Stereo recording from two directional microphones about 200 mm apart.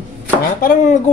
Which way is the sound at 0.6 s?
45° left (ahead or behind).